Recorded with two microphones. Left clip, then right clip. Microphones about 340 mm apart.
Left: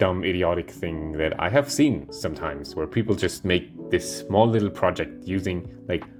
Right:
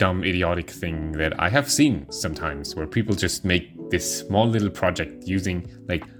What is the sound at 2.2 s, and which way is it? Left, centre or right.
Speech, right.